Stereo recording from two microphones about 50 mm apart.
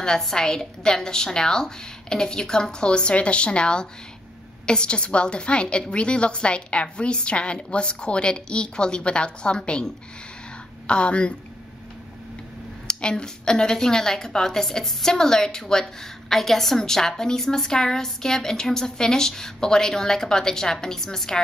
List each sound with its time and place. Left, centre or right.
0.0 s a woman's voice: centre
12.8 s a woman's voice: centre